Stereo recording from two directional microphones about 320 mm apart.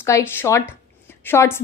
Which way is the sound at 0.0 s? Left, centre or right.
Centre.